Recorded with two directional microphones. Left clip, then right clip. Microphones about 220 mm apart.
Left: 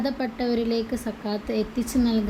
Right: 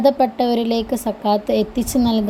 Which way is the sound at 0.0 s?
30° right (ahead or behind).